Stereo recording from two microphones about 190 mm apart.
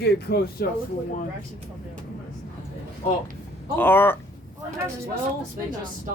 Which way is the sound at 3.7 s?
10° left (ahead or behind).